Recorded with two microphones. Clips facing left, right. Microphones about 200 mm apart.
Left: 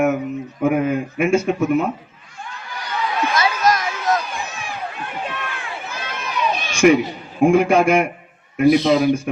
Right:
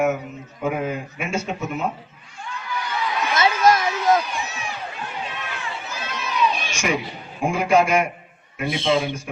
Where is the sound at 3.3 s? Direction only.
25° right (ahead or behind).